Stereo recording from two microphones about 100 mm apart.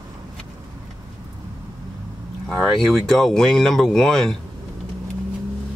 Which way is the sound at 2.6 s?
Centre (ahead or behind).